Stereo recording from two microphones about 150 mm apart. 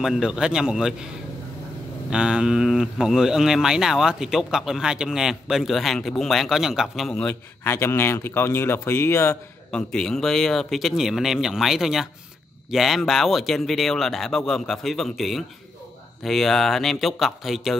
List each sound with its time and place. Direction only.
0.0 s speech: 5° right (ahead or behind)
2.0 s speech: 5° right (ahead or behind)
7.6 s speech: 15° left (ahead or behind)
9.7 s speech: 5° left (ahead or behind)